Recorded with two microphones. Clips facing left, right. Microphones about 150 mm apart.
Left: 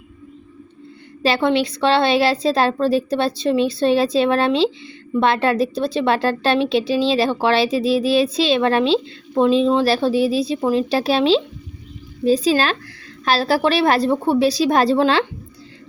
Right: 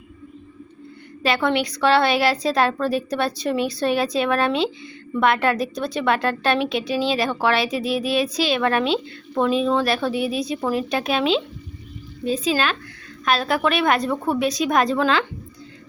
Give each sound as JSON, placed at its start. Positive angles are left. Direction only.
{"t": 1.2, "sound": "a woman's voice", "side_deg": 25}